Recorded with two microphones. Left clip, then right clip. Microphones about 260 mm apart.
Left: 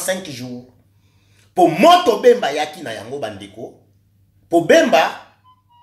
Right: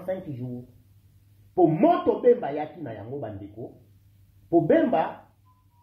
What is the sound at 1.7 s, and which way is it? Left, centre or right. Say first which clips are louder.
Speech: left 10 dB; centre.